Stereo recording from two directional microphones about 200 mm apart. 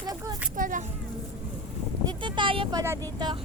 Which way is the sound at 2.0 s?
25° right (ahead or behind).